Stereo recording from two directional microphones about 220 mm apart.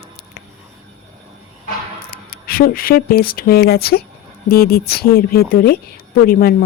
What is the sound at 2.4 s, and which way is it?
A woman's voice, 40° left (ahead or behind).